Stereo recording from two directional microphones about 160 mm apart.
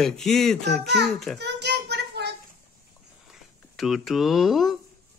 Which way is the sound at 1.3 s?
90° right.